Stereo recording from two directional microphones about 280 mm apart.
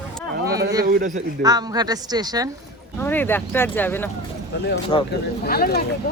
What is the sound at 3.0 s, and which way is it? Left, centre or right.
Speech, centre.